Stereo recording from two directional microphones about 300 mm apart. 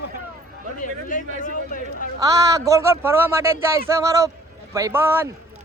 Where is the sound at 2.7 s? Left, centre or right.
Centre.